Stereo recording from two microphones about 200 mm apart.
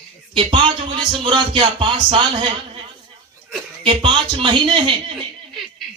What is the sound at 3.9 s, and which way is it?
Speech, 25° right (ahead or behind).